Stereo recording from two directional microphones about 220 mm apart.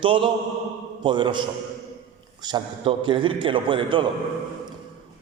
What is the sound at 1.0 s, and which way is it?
Speech, 20° right (ahead or behind).